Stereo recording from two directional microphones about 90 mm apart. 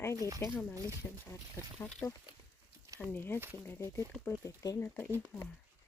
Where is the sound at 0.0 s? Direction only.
30° left (ahead or behind).